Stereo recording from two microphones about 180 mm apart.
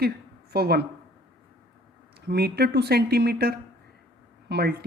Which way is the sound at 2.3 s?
65° right (ahead or behind).